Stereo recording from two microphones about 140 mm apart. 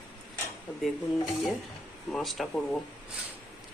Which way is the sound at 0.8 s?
Centre (ahead or behind).